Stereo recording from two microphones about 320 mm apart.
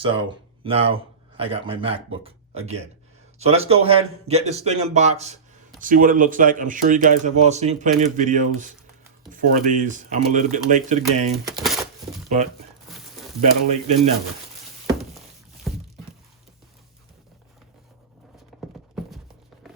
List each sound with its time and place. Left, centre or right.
0.0 s a man's voice: centre
3.3 s speech: centre
11.4 s speech: centre
12.3 s speech: right
15.7 s a sound: centre
19.0 s a sound: centre